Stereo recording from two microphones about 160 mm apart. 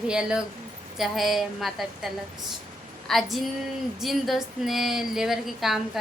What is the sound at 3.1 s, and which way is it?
A woman's voice, centre (ahead or behind).